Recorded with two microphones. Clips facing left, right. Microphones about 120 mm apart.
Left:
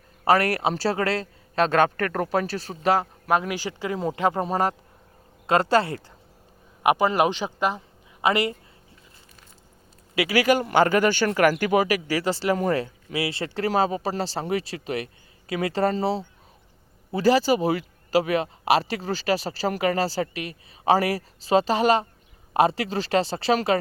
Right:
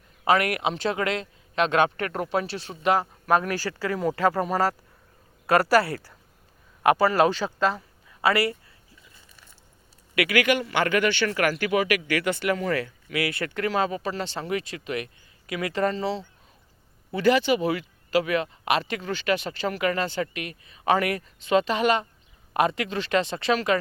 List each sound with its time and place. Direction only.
0.3 s speech: 35° left (ahead or behind)
3.3 s speech: 15° left (ahead or behind)
10.2 s speech: 35° left (ahead or behind)
12.8 s speech: 30° left (ahead or behind)